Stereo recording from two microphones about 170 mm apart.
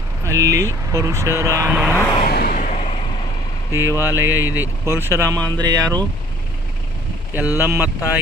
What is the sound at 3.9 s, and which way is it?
Speech, 20° left (ahead or behind).